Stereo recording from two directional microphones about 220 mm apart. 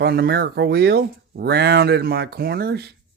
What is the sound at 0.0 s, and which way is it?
Speech, 45° right (ahead or behind).